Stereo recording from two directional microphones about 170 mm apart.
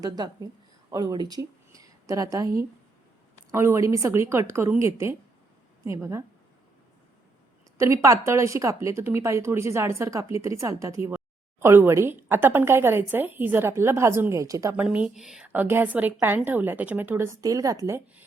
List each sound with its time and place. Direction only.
0.0 s a woman's voice: 20° right (ahead or behind)
7.8 s speech: 20° right (ahead or behind)
14.8 s speech: 5° right (ahead or behind)